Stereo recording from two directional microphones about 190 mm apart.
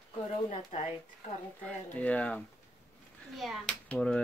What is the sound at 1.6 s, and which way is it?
Speech, 5° left (ahead or behind).